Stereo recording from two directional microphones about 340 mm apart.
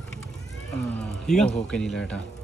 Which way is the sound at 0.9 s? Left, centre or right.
Centre.